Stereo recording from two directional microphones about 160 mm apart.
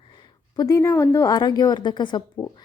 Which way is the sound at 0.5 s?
20° left (ahead or behind).